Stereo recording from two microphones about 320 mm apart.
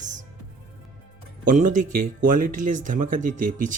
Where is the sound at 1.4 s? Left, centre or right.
Right.